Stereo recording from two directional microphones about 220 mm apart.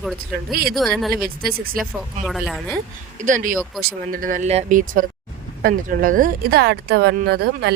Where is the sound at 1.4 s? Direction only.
45° right (ahead or behind).